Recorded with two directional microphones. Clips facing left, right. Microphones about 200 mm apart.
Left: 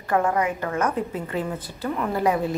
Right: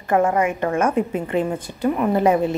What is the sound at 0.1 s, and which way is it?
A woman's voice, 25° right (ahead or behind).